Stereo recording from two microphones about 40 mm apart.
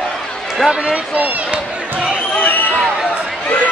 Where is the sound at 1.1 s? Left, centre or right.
Right.